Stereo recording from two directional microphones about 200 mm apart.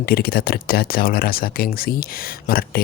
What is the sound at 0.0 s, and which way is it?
A man's voice, 50° left (ahead or behind).